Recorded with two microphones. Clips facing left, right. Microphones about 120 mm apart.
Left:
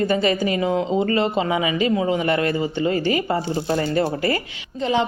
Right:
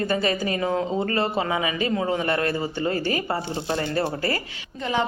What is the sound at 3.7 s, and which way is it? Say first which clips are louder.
Speech: left 4 dB; 30° left (ahead or behind).